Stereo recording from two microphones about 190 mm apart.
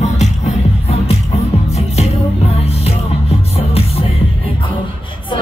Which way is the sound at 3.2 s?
30° left (ahead or behind).